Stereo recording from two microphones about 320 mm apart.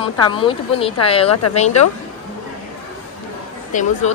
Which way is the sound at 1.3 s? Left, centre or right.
Left.